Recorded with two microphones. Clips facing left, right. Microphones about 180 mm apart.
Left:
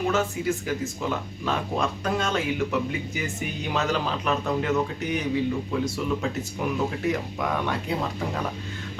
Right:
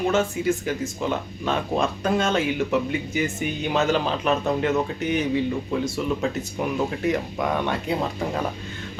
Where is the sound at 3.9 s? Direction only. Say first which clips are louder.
Right 4 dB; 25° right (ahead or behind).